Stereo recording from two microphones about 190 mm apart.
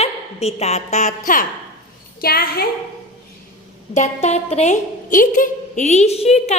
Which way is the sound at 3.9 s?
40° left (ahead or behind).